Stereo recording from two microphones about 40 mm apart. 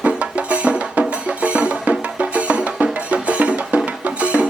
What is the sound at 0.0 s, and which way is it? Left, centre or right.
Music, right.